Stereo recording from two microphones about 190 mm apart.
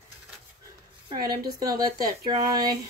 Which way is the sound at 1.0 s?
20° right (ahead or behind).